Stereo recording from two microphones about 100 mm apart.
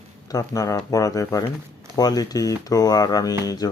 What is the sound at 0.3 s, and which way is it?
Speech, 35° left (ahead or behind).